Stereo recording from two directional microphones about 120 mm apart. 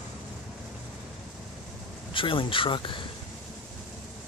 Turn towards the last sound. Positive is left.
turn(degrees=45)  # may be behind; listen again after turning